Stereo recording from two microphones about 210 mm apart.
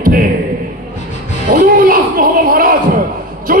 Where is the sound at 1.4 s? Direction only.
40° right (ahead or behind).